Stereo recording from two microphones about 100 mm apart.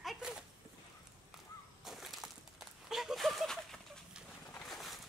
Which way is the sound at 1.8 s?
Centre (ahead or behind).